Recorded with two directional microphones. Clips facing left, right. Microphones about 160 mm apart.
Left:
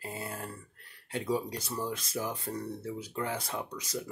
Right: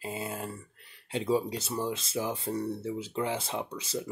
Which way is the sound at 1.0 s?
25° right (ahead or behind).